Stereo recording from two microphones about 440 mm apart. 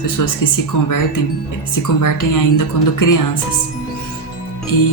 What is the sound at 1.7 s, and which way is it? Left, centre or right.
Speech, left.